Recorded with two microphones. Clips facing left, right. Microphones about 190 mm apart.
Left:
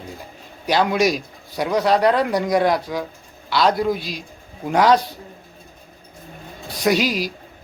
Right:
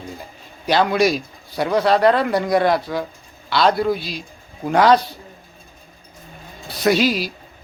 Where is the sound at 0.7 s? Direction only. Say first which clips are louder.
Right 1 dB; 10° left (ahead or behind).